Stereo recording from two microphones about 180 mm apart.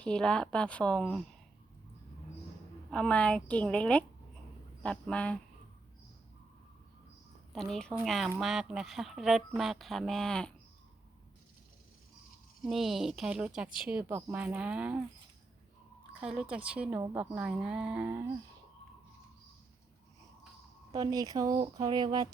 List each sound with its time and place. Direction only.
0.0 s speech: 5° left (ahead or behind)
2.9 s a woman's voice: 5° left (ahead or behind)
7.5 s speech: centre (ahead or behind)
12.6 s a woman's voice: centre (ahead or behind)
16.2 s a woman's voice: 5° right (ahead or behind)
20.9 s speech: 20° right (ahead or behind)